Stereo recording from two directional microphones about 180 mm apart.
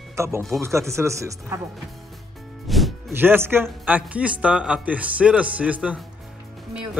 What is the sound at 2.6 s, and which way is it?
Music, centre (ahead or behind).